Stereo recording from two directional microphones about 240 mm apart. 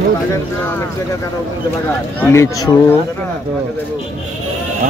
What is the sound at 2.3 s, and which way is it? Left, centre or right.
Speech, centre.